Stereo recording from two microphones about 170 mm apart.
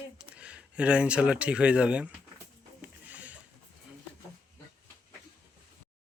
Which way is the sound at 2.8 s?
10° right (ahead or behind).